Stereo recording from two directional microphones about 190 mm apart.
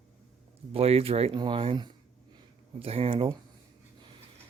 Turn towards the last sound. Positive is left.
turn(degrees=-30)  # may be behind; listen again after turning